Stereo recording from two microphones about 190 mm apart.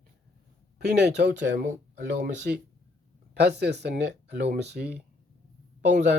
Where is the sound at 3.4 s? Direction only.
60° right (ahead or behind).